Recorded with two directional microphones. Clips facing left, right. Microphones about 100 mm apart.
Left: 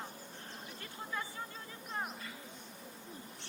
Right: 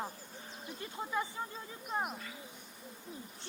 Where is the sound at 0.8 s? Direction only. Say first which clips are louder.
Right 6 dB; 20° right (ahead or behind).